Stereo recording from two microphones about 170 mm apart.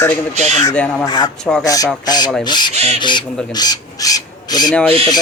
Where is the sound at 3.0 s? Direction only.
25° left (ahead or behind).